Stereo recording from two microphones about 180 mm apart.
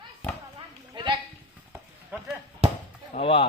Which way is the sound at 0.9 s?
25° right (ahead or behind).